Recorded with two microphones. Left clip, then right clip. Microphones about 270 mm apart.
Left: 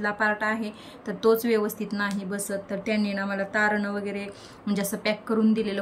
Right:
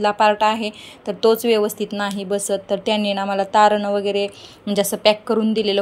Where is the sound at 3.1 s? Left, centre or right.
Right.